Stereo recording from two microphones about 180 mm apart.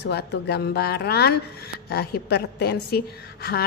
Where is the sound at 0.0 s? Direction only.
65° left (ahead or behind).